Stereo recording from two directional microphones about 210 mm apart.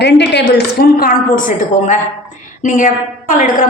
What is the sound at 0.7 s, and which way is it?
A woman's voice, 40° left (ahead or behind).